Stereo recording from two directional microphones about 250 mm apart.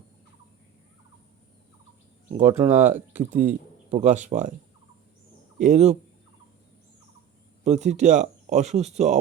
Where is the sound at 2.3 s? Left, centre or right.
Centre.